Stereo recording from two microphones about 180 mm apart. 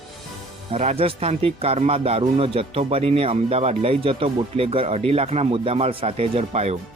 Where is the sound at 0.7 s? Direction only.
35° right (ahead or behind).